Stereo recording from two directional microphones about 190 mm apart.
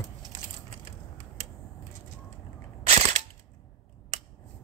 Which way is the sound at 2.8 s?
35° right (ahead or behind).